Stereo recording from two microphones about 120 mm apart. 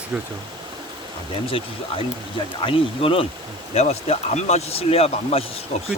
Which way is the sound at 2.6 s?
50° left (ahead or behind).